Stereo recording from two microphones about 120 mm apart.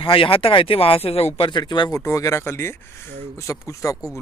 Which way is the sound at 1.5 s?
40° left (ahead or behind).